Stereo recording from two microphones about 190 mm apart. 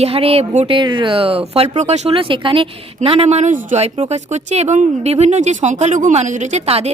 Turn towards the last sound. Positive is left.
turn(degrees=-35)  # may be behind; listen again after turning